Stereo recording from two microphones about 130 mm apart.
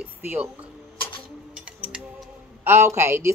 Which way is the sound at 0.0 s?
10° right (ahead or behind).